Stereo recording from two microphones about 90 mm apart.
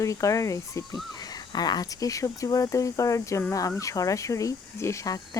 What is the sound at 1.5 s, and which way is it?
Speech, 50° left (ahead or behind).